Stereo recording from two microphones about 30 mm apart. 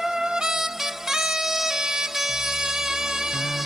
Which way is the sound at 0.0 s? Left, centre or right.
Centre.